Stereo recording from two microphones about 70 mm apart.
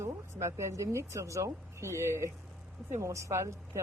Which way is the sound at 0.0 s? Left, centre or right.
Right.